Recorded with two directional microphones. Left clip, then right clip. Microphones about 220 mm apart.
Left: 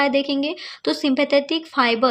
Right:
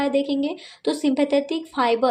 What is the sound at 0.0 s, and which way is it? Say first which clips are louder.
Speech: left 3 dB; 20° left (ahead or behind).